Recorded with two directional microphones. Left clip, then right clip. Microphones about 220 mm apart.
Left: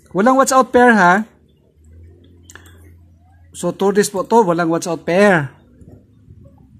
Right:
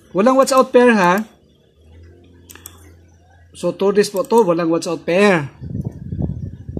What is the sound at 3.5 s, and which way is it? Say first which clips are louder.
Speech: even; 20° left (ahead or behind).